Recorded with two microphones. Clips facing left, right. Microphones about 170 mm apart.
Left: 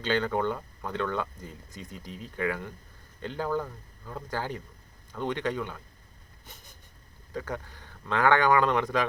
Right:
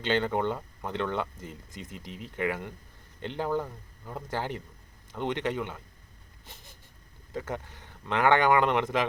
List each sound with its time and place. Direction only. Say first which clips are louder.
0.0 s speech: even; 20° right (ahead or behind)
6.4 s a sound: even; 25° right (ahead or behind)
7.3 s speech: even; 25° right (ahead or behind)